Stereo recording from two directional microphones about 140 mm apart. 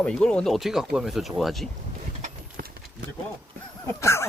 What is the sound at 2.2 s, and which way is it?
Clip-clop, 90° right.